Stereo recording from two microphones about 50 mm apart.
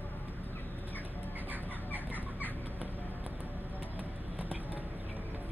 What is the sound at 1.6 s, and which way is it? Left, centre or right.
Chicken, left.